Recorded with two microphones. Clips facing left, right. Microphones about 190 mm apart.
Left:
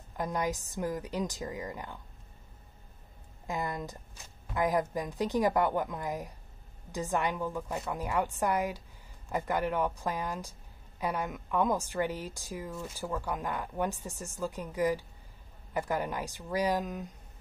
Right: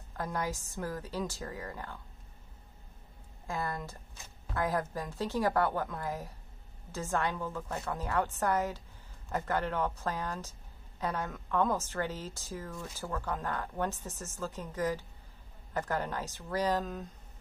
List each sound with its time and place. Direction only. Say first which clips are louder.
0.1 s a woman's voice: left 3 dB; 15° left (ahead or behind)
3.4 s a woman's voice: left 2 dB; 20° left (ahead or behind)